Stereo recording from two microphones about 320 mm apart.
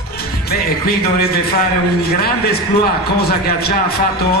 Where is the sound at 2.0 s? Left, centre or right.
Left.